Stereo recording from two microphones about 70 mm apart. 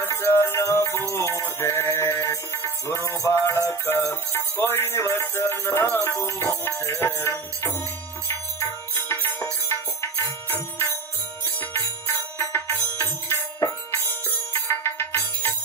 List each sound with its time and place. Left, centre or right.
0.2 s music: left
9.1 s music: left
12.4 s music: left